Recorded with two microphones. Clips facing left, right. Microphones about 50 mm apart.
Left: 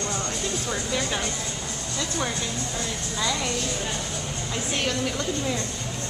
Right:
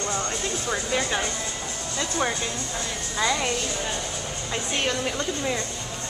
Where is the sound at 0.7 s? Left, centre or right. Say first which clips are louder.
Right 4 dB; centre.